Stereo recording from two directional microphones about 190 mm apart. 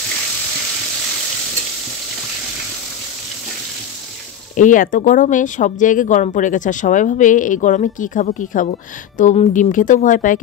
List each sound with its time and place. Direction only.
4.6 s speech: 45° left (ahead or behind)